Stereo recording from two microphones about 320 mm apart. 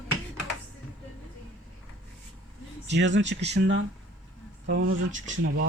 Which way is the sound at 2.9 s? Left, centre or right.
Right.